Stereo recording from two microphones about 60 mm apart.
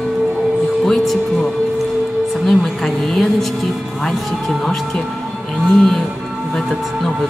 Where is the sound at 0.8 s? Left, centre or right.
Centre.